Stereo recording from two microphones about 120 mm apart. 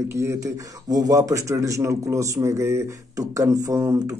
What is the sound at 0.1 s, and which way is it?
Speech, 25° right (ahead or behind).